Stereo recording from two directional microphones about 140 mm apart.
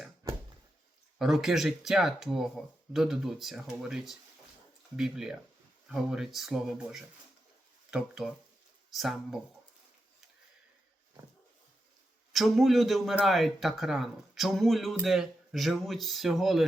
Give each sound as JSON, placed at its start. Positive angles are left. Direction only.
{"t": 1.2, "sound": "speech", "side_deg": 0}
{"t": 12.3, "sound": "speech", "side_deg": 0}